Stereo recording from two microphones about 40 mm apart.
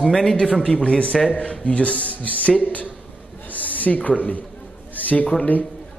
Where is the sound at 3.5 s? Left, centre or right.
Left.